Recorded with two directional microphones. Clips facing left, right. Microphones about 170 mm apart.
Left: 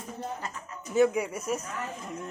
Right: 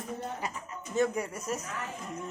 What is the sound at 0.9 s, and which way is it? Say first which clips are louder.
Speech: left 5 dB; 5° left (ahead or behind).